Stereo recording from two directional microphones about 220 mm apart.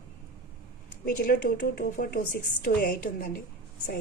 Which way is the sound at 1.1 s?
40° left (ahead or behind).